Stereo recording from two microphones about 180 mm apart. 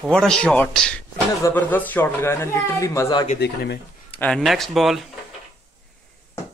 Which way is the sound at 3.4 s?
65° left (ahead or behind).